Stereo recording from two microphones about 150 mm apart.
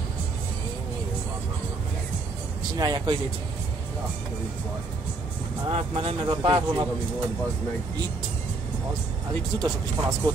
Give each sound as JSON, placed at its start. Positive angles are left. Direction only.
{"t": 2.8, "sound": "speech", "side_deg": -25}
{"t": 5.7, "sound": "speech", "side_deg": -40}
{"t": 9.6, "sound": "speech", "side_deg": -25}